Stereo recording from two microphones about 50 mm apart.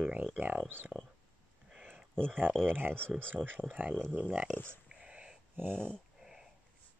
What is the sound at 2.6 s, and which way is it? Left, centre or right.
Speech, right.